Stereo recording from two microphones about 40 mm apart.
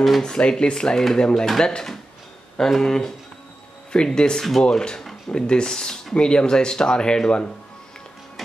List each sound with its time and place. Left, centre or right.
0.2 s speech: left
6.1 s speech: left